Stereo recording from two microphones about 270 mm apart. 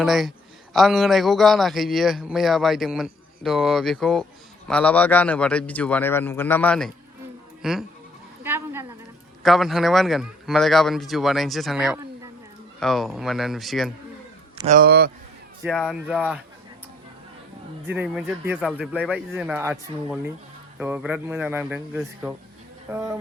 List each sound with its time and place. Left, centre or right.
0.0 s speech: centre
8.4 s a sound: centre
9.4 s speech: centre
14.7 s a man's voice: right
15.6 s speech: centre
17.8 s speech: centre